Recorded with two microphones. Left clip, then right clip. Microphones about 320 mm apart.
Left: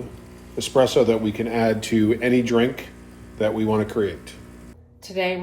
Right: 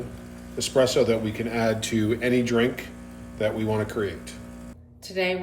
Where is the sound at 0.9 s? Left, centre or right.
Centre.